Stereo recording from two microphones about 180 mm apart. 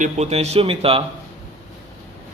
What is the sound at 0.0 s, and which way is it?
Speech, 35° right (ahead or behind).